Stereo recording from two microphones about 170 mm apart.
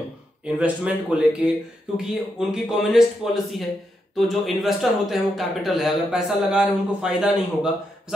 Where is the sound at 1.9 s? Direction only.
5° right (ahead or behind).